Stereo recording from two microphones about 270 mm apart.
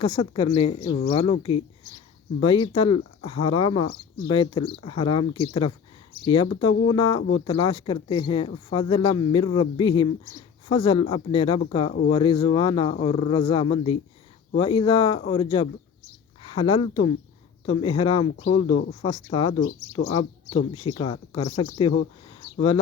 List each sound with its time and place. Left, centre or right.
0.0 s speech: centre
7.2 s speech: left
7.4 s speech: centre
20.7 s speech: centre